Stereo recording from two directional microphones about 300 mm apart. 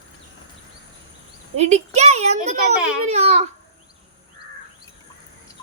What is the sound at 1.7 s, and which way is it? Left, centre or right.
A child's voice, right.